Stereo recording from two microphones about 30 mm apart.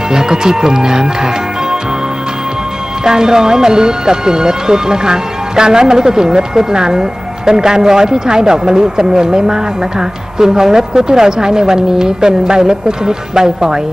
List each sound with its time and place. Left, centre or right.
0.1 s speech: right
3.0 s speech: right